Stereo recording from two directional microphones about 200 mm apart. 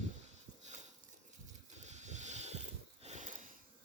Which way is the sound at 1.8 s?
35° right (ahead or behind).